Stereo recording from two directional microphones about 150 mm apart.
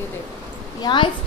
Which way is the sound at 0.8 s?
30° left (ahead or behind).